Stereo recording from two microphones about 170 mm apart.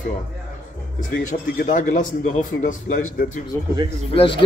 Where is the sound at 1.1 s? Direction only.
45° left (ahead or behind).